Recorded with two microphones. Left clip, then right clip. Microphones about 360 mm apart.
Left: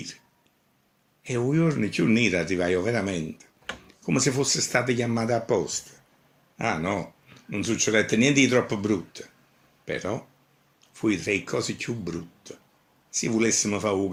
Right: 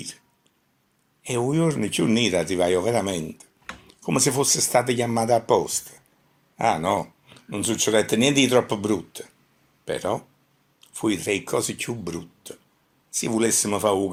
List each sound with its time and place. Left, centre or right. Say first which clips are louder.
1.2 s speech: right 2 dB; centre